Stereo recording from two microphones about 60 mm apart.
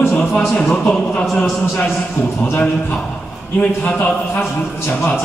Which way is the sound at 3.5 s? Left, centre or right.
Left.